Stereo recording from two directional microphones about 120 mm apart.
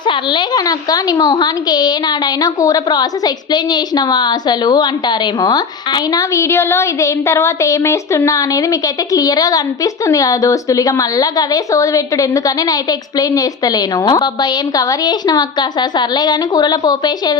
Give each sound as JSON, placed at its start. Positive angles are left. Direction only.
{"t": 0.0, "sound": "a woman's voice", "side_deg": 40}